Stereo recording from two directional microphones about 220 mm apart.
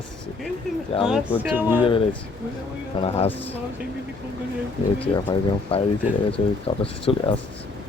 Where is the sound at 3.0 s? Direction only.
30° left (ahead or behind).